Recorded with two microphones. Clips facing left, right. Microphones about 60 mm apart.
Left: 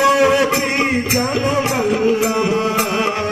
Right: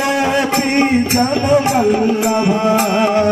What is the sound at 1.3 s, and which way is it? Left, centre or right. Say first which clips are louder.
Music: right 6 dB; centre.